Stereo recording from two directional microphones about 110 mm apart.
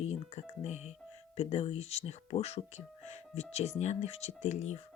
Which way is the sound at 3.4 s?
85° left.